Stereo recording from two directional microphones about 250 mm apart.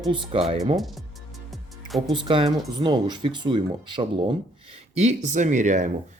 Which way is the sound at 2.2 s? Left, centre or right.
Right.